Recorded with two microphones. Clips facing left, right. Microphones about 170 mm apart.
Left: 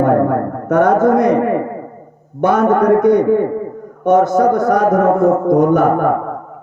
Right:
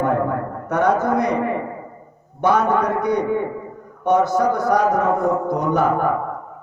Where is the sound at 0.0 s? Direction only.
50° left (ahead or behind).